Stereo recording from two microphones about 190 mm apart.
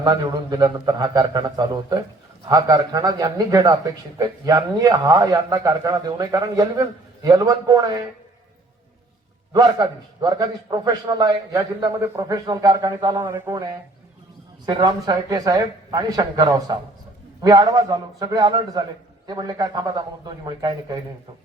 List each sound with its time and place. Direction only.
0.0 s a man's voice: 20° right (ahead or behind)
9.5 s a man's voice: 20° right (ahead or behind)
14.7 s a man's voice: 20° right (ahead or behind)